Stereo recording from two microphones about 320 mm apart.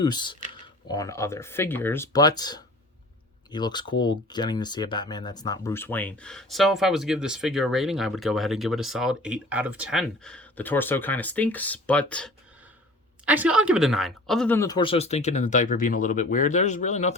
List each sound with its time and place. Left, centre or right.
0.0 s speech: centre